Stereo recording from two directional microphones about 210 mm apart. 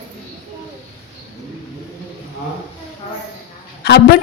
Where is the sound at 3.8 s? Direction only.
50° left (ahead or behind).